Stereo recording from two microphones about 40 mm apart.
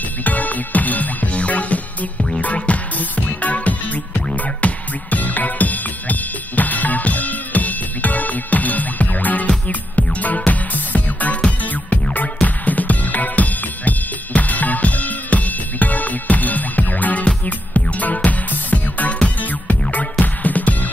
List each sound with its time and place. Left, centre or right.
0.2 s music: left